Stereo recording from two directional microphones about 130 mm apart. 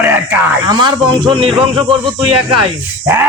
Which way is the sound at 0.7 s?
35° right (ahead or behind).